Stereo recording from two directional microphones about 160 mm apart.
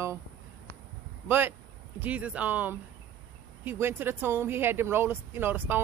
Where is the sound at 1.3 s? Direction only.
15° right (ahead or behind).